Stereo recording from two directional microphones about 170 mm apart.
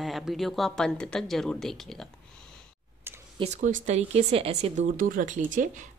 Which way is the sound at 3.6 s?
50° right (ahead or behind).